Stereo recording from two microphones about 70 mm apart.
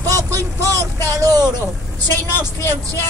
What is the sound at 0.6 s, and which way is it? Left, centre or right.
Speech, right.